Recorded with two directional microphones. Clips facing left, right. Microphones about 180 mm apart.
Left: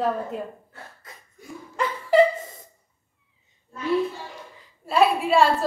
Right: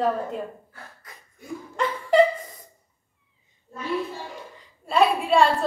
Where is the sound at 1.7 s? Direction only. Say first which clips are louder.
Left 1 dB; centre (ahead or behind).